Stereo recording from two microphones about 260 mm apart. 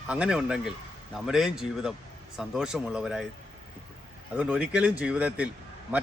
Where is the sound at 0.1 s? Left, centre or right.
Centre.